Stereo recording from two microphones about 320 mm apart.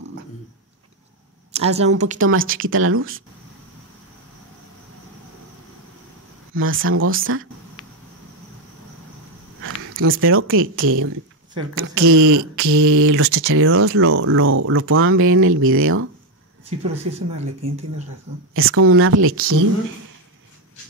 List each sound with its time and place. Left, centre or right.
1.5 s speech: centre
2.1 s speech: right
6.5 s speech: right
9.6 s a sound: right
10.2 s speech: right
16.6 s speech: centre
18.5 s speech: right